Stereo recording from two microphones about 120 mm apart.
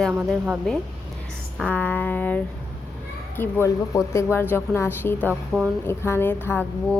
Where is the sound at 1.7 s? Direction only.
15° left (ahead or behind).